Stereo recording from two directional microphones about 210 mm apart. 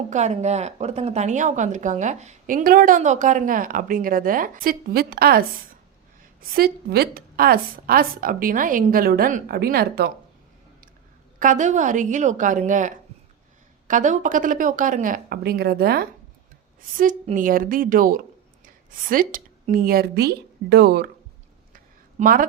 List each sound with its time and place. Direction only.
0.1 s a woman's voice: 35° right (ahead or behind)
11.3 s a woman's voice: 35° right (ahead or behind)
22.2 s a woman's voice: 40° right (ahead or behind)